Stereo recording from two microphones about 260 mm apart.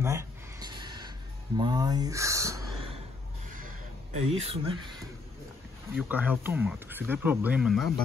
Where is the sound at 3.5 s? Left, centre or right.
Right.